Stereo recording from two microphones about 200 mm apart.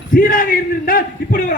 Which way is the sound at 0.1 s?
45° left (ahead or behind).